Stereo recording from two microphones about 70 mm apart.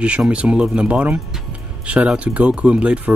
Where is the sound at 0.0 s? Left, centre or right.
Centre.